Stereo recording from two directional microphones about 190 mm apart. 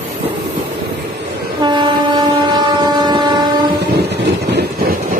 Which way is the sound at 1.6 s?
25° right (ahead or behind).